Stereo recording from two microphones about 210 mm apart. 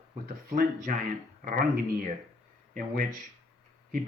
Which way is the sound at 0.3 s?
45° right (ahead or behind).